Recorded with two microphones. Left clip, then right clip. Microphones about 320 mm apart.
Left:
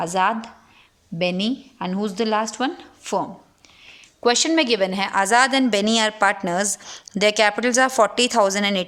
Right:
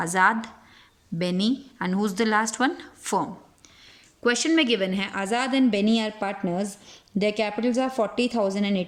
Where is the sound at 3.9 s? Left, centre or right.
Centre.